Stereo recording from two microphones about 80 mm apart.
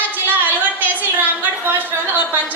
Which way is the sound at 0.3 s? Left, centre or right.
Right.